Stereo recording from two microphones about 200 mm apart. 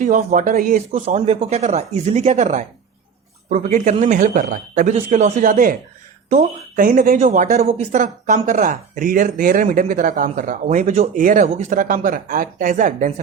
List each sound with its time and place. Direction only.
0.0 s speech: 40° right (ahead or behind)
0.9 s speech: 30° right (ahead or behind)